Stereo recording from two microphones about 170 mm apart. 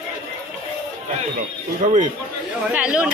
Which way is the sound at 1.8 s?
45° right (ahead or behind).